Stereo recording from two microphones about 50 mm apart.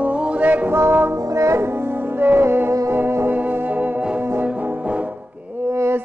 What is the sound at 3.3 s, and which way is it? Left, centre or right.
Music, right.